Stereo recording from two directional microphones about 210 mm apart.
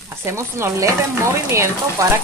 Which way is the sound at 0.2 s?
15° right (ahead or behind).